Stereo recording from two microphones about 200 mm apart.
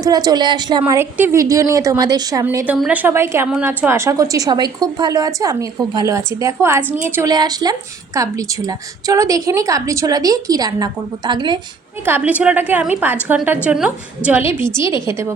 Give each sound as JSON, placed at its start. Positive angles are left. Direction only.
{"t": 0.0, "sound": "a woman's voice", "side_deg": -20}
{"t": 12.0, "sound": "a woman's voice", "side_deg": -10}